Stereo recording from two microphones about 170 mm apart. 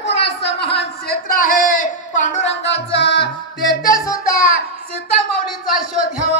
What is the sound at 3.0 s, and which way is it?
Music, 90° left.